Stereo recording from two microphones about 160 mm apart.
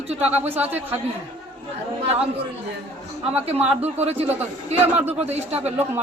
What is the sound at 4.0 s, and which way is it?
Speech, 40° right (ahead or behind).